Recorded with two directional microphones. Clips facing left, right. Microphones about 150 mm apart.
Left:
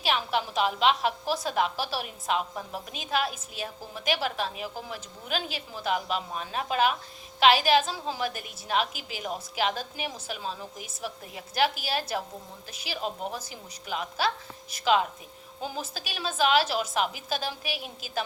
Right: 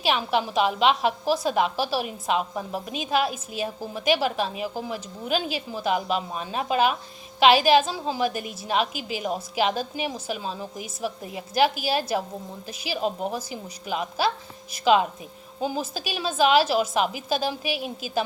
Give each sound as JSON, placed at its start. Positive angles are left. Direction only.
{"t": 0.0, "sound": "a woman's voice", "side_deg": -15}
{"t": 13.3, "sound": "a woman's voice", "side_deg": -10}
{"t": 15.6, "sound": "a woman's voice", "side_deg": -10}